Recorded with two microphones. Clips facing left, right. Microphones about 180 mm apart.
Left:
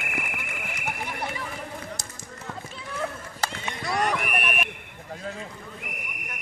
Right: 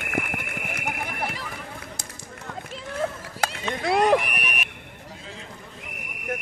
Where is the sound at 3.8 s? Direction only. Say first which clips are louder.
Right 7 dB; 60° right (ahead or behind).